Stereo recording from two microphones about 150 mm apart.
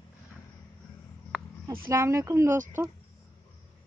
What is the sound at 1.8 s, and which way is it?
Speech, 15° right (ahead or behind).